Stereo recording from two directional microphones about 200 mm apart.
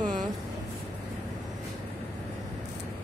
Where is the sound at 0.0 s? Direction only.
40° right (ahead or behind).